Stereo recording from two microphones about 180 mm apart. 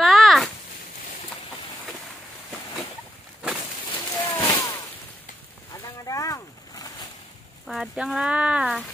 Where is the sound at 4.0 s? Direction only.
20° left (ahead or behind).